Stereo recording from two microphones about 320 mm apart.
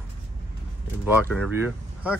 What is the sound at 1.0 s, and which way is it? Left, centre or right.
Speech, centre.